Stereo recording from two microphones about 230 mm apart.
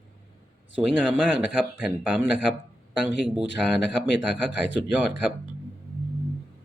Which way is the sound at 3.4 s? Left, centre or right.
Left.